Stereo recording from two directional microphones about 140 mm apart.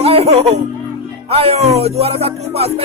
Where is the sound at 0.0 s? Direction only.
45° right (ahead or behind).